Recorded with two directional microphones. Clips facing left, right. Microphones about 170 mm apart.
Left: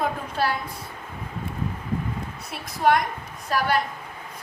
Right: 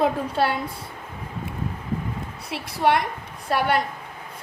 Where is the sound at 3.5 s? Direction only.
30° right (ahead or behind).